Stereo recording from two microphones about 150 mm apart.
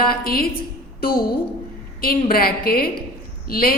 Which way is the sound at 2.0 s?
80° left.